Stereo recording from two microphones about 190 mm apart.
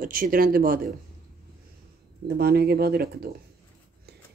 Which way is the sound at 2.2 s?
55° right (ahead or behind).